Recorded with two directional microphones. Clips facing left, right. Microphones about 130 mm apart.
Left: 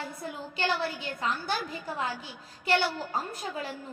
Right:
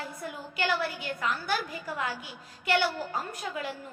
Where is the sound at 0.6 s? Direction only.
30° left (ahead or behind).